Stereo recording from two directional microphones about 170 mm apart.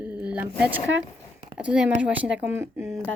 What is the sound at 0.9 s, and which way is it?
Speech, 90° right.